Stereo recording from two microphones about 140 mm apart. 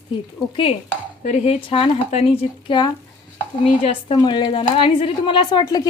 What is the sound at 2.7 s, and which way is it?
Speech, 30° left (ahead or behind).